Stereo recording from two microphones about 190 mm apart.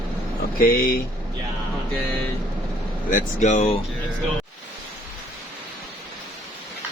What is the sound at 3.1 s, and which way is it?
Speech, 40° left (ahead or behind).